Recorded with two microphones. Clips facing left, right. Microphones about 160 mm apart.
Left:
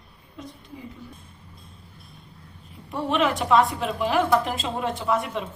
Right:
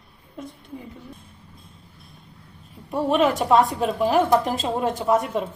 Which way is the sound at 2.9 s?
40° right (ahead or behind).